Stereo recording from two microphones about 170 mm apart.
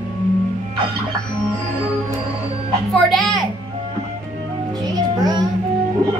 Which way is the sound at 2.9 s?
Centre (ahead or behind).